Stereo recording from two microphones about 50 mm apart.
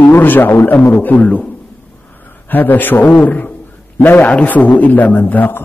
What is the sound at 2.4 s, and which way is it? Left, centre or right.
A man's voice, left.